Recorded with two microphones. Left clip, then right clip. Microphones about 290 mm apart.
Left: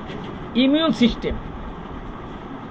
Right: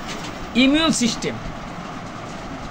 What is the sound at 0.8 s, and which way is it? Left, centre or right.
Speech, centre.